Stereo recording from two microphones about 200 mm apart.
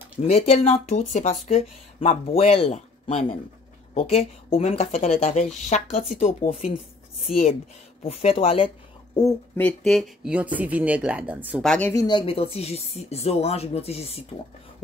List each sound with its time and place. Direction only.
0.3 s speech: 30° left (ahead or behind)
8.0 s speech: 30° left (ahead or behind)
9.6 s speech: 5° left (ahead or behind)
11.6 s speech: 5° left (ahead or behind)
11.9 s speech: 20° left (ahead or behind)